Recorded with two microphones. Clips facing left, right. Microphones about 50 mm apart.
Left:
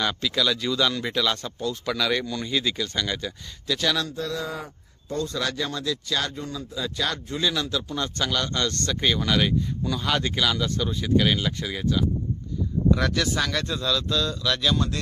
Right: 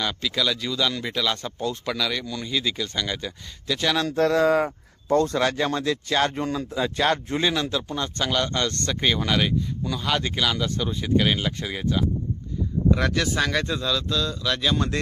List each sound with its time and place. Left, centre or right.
0.0 s a man's voice: centre
1.5 s speech: right
1.9 s a man's voice: centre
4.1 s speech: right
5.4 s speech: right
6.3 s speech: right
6.7 s speech: right
7.5 s speech: centre